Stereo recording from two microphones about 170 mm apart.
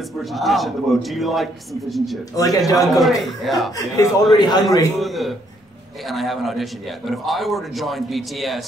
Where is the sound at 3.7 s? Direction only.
20° left (ahead or behind).